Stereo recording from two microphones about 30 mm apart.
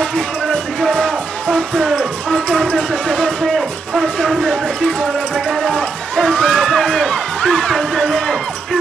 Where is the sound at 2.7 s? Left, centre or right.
Left.